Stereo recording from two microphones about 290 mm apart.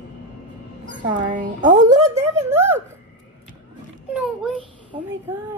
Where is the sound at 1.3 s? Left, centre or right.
Right.